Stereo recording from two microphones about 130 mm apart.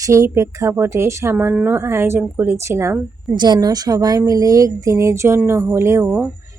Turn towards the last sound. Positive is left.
turn(degrees=-20)  # may be behind; listen again after turning